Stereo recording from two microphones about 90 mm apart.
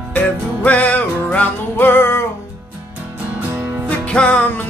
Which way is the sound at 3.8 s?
15° left (ahead or behind).